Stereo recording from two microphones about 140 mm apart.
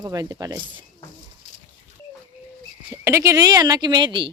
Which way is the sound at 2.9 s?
20° right (ahead or behind).